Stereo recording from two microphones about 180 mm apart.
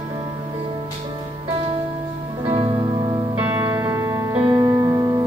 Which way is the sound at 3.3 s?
10° right (ahead or behind).